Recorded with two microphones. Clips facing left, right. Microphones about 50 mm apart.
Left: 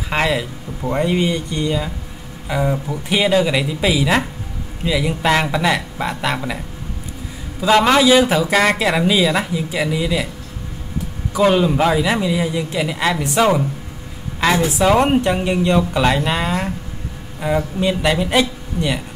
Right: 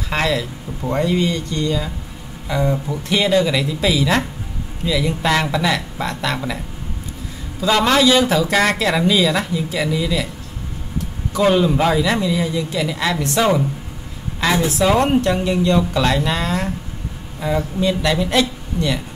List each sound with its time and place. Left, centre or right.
0.1 s speech: centre
7.6 s speech: centre
11.3 s speech: centre
14.8 s speech: left